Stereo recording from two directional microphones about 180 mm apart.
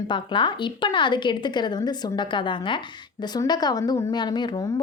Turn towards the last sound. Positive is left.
turn(degrees=20)  # may be behind; listen again after turning